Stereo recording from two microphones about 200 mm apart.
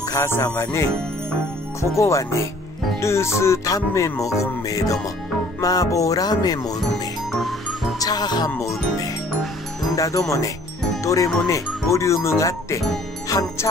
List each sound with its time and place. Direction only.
0.1 s speech: 15° left (ahead or behind)
7.3 s music: centre (ahead or behind)
8.0 s speech: 20° left (ahead or behind)
11.4 s speech: 15° left (ahead or behind)